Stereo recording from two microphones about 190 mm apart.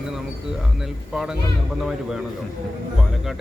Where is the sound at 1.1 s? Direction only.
5° right (ahead or behind).